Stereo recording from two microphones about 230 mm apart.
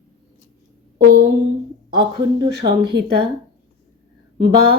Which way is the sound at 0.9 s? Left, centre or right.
Right.